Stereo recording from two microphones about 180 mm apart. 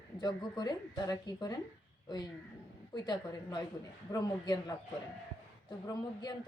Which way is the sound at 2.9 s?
25° left (ahead or behind).